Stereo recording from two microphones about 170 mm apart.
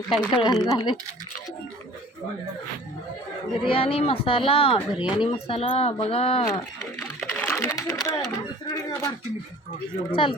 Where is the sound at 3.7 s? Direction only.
35° left (ahead or behind).